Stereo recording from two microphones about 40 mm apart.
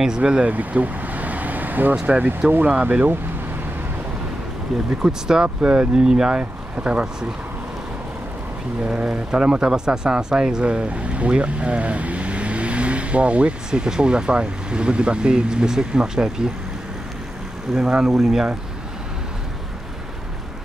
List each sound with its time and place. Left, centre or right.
0.2 s vehicle: right
2.0 s speech: right
4.8 s speech: centre
6.8 s speech: right
8.8 s speech: right
13.7 s speech: centre
17.7 s speech: right
18.0 s speech: centre